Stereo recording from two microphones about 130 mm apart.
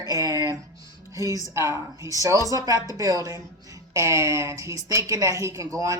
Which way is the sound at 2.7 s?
30° left (ahead or behind).